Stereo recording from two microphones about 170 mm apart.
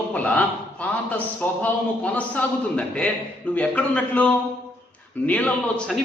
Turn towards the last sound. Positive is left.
turn(degrees=5)  # may be behind; listen again after turning